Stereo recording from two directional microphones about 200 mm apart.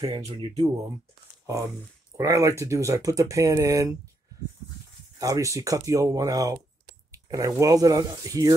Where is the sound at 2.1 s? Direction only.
15° right (ahead or behind).